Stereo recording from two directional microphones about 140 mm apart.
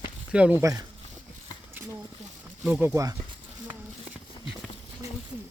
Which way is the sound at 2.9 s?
25° right (ahead or behind).